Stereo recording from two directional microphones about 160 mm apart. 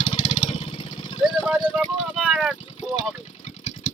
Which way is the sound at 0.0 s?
30° left (ahead or behind).